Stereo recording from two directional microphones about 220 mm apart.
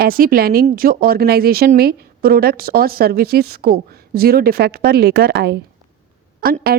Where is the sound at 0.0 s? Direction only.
40° right (ahead or behind).